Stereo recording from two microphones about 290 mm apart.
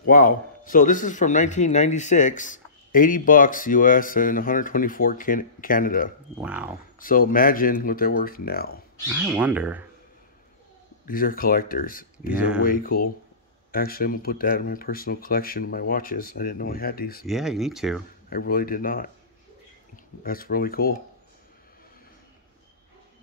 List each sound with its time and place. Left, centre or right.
0.0 s a man's voice: left
6.4 s speech: centre
7.0 s a man's voice: left
9.1 s speech: centre
11.1 s a man's voice: left
17.3 s speech: centre
18.3 s a man's voice: left
20.2 s speech: left